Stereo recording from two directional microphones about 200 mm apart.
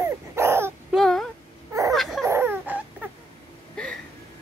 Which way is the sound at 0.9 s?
Centre (ahead or behind).